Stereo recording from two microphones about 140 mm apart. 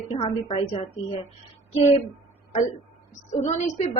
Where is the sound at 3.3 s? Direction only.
55° left (ahead or behind).